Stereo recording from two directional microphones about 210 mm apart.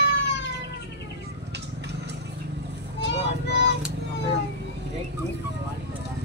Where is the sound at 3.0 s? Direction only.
55° left (ahead or behind).